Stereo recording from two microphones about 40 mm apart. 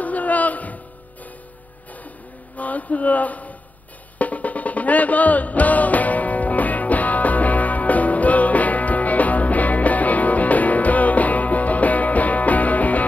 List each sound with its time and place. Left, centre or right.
0.0 s a sound: left
2.5 s speech: left
4.2 s music: left